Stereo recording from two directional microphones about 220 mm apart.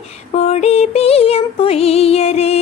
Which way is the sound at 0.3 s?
30° left (ahead or behind).